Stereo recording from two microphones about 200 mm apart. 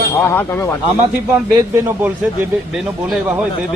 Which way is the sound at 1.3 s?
10° right (ahead or behind).